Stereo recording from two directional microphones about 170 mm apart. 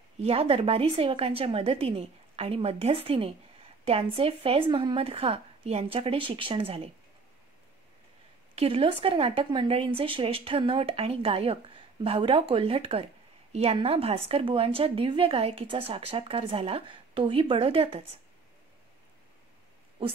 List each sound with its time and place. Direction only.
0.2 s a woman's voice: 35° right (ahead or behind)
8.5 s a woman's voice: 35° right (ahead or behind)